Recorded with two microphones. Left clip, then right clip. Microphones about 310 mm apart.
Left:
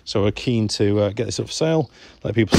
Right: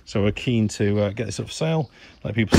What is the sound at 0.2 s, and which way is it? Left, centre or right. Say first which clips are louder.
Speech: even; left.